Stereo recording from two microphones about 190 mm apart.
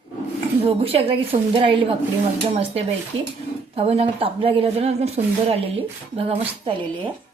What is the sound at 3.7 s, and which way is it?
Speech, 30° right (ahead or behind).